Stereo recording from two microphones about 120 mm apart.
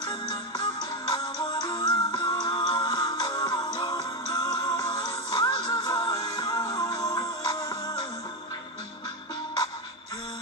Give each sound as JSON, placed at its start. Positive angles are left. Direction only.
{"t": 0.0, "sound": "music", "side_deg": 35}